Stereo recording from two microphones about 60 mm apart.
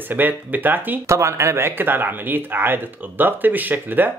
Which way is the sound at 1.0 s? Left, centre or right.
Right.